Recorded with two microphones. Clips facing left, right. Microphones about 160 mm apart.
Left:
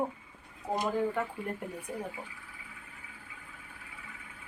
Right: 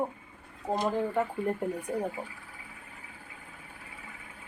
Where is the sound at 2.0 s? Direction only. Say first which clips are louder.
Right 6 dB; 45° right (ahead or behind).